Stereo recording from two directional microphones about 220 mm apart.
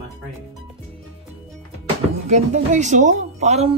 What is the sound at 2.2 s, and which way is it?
Speech, 30° right (ahead or behind).